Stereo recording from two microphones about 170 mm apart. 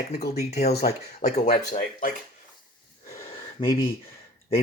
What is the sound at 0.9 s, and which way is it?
Speech, 40° left (ahead or behind).